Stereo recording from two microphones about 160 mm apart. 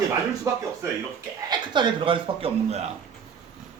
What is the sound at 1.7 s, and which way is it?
Speech, 30° right (ahead or behind).